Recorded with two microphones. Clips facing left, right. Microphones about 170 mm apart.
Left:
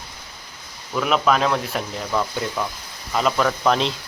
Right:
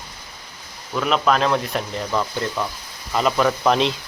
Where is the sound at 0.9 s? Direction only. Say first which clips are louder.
Even; 5° left (ahead or behind).